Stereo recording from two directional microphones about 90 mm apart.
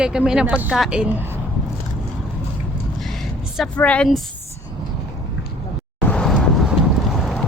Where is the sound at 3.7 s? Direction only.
15° left (ahead or behind).